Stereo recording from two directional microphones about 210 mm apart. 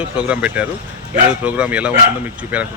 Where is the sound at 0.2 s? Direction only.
5° right (ahead or behind).